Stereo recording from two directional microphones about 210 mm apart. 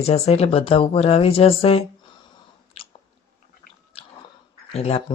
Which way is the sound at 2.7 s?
25° left (ahead or behind).